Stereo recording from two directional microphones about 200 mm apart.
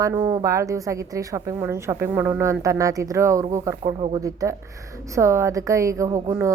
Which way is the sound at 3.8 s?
25° right (ahead or behind).